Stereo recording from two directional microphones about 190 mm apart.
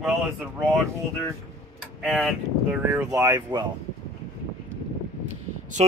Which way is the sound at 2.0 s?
Centre (ahead or behind).